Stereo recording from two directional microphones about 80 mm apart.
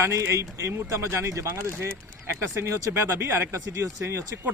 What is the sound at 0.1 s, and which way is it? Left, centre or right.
Speech, right.